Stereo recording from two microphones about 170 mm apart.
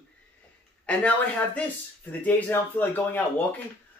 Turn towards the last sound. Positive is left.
turn(degrees=10)  # may be behind; listen again after turning